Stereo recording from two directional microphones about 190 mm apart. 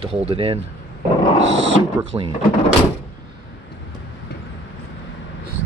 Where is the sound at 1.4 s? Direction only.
75° right (ahead or behind).